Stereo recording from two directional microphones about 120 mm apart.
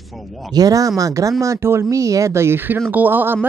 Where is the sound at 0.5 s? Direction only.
30° right (ahead or behind).